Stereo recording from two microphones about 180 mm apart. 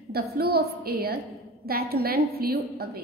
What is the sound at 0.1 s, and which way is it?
A woman's voice, 60° right (ahead or behind).